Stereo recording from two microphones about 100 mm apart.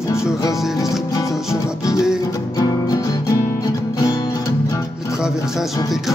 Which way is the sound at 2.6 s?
35° left (ahead or behind).